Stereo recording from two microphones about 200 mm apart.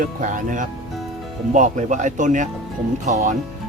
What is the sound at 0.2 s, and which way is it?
Speech, 40° right (ahead or behind).